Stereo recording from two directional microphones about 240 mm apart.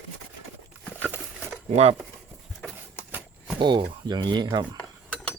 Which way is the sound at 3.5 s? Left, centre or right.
Centre.